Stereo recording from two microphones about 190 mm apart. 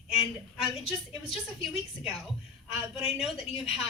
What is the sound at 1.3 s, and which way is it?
A woman's voice, centre (ahead or behind).